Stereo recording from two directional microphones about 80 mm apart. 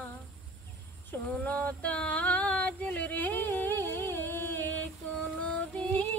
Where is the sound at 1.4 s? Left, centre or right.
Centre.